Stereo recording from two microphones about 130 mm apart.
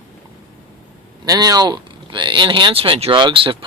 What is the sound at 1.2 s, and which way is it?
Speech, 30° right (ahead or behind).